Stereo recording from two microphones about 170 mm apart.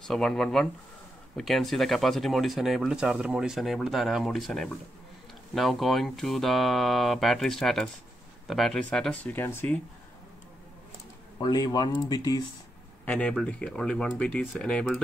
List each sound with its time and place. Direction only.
0.1 s speech: 5° left (ahead or behind)
11.3 s speech: 20° left (ahead or behind)
13.0 s speech: 10° left (ahead or behind)